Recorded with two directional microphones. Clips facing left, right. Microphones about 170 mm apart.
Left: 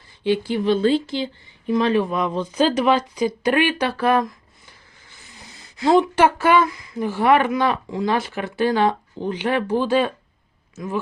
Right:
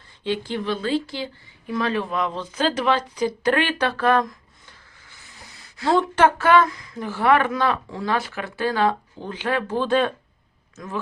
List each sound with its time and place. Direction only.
0.3 s speech: 10° left (ahead or behind)
0.7 s speech: 25° left (ahead or behind); by 11.0 s 10° left (ahead or behind)